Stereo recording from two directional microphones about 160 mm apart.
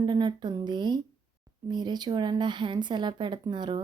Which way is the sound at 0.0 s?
30° right (ahead or behind).